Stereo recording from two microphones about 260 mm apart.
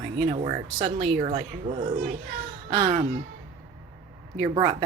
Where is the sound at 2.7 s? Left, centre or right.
Centre.